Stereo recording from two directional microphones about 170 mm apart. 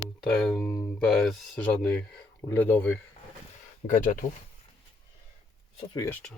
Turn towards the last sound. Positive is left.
turn(degrees=20)  # may be behind; listen again after turning